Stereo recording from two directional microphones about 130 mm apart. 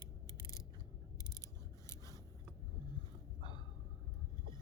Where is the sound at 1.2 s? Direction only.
20° left (ahead or behind).